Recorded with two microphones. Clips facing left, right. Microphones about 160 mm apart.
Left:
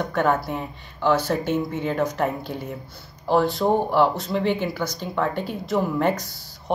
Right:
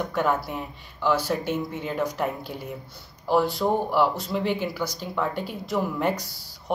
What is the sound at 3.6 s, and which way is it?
Speech, 20° left (ahead or behind).